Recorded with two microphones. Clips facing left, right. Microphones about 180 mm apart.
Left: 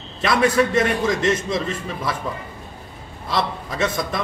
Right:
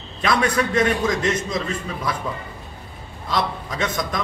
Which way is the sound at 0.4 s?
5° left (ahead or behind).